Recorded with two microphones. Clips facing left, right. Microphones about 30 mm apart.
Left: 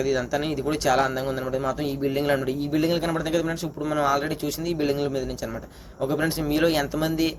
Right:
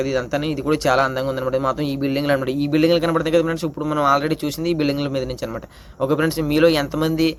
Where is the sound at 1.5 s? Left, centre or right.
Right.